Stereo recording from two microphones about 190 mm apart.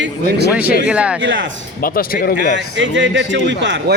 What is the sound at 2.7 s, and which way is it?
A man's voice, 75° right (ahead or behind).